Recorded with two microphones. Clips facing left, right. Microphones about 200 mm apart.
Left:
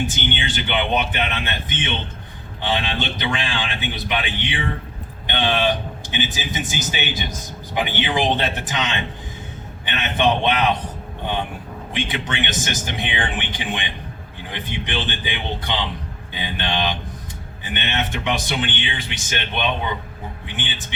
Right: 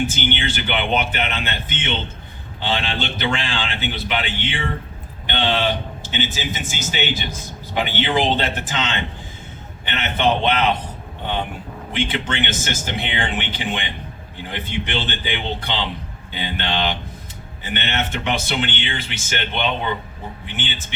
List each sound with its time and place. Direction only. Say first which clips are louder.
0.0 s speech: right 2 dB; 15° left (ahead or behind)
11.9 s speech: right 2 dB; 15° left (ahead or behind)